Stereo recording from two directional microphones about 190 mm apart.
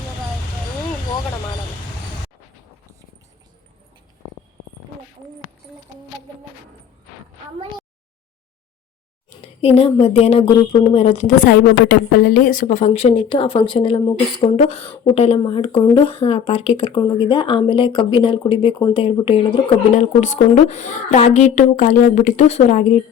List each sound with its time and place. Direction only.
9.4 s a sound: 30° left (ahead or behind)
10.0 s a woman's voice: 30° left (ahead or behind)
11.9 s a woman's voice: 50° left (ahead or behind); by 19.5 s 25° left (ahead or behind)
19.9 s a woman's voice: 40° left (ahead or behind)